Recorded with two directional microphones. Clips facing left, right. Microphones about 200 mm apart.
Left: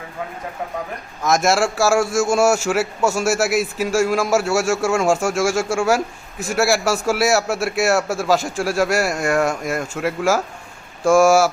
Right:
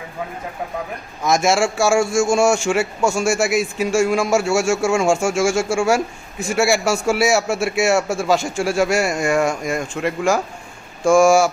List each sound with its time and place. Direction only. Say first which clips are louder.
1.2 s a man's voice: even; centre (ahead or behind)